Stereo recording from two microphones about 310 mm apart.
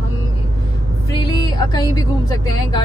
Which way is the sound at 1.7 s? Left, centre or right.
Centre.